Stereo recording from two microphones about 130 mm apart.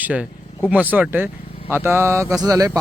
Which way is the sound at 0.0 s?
10° right (ahead or behind).